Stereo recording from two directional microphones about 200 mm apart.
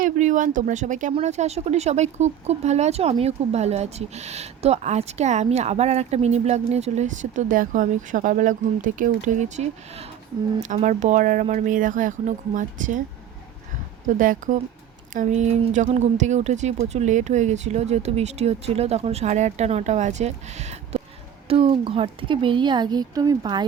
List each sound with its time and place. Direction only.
0.0 s speech: 40° right (ahead or behind)
14.2 s speech: 40° right (ahead or behind); by 23.6 s 20° right (ahead or behind)